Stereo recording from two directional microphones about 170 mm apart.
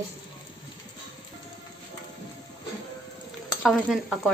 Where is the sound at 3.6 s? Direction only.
Centre (ahead or behind).